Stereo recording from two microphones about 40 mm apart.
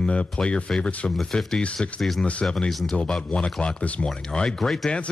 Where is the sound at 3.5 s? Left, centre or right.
Left.